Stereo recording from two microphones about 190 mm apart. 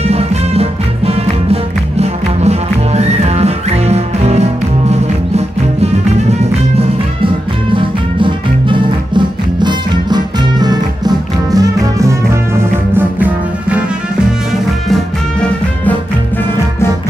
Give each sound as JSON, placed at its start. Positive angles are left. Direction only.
{"t": 0.0, "sound": "music", "side_deg": -35}
{"t": 7.7, "sound": "music", "side_deg": -25}